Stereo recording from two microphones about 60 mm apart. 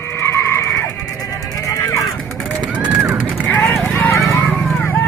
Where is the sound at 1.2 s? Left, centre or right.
Left.